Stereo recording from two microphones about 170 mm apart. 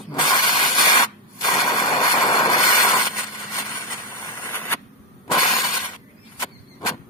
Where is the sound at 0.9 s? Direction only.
25° left (ahead or behind).